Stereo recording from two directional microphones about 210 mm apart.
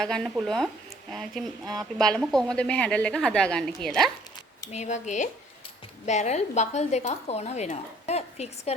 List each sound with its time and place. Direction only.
0.0 s a woman's voice: 5° left (ahead or behind)
1.6 s speech: 20° right (ahead or behind)
2.0 s a woman's voice: 5° left (ahead or behind)
4.7 s speech: 35° left (ahead or behind)